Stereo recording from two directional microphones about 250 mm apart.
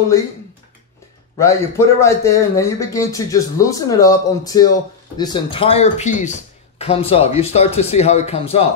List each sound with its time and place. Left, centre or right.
1.4 s speech: centre